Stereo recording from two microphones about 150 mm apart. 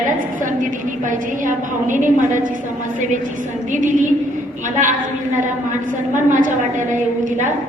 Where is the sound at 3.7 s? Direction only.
60° right (ahead or behind).